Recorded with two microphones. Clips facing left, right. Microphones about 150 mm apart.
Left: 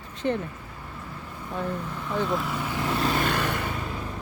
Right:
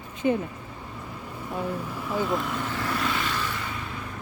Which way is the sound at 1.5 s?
10° right (ahead or behind).